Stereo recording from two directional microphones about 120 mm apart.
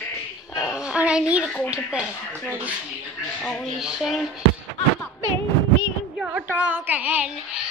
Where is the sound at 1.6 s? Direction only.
10° right (ahead or behind).